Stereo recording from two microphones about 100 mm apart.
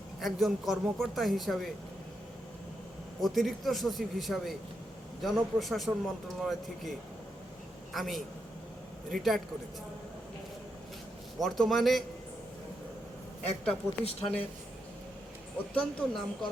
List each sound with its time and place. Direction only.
0.2 s a man's voice: centre (ahead or behind)
3.2 s a man's voice: centre (ahead or behind)
7.9 s a man's voice: centre (ahead or behind)
11.3 s a man's voice: centre (ahead or behind)
13.7 s speech: 80° left
15.7 s speech: 10° left (ahead or behind)